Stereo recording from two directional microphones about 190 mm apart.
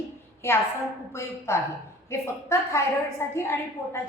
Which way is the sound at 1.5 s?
15° left (ahead or behind).